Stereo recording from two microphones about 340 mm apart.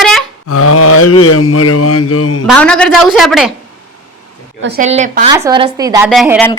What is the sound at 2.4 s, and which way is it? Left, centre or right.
A woman's voice, centre.